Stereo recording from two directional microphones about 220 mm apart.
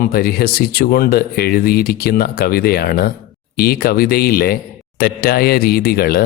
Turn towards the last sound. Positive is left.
turn(degrees=45)  # may be behind; listen again after turning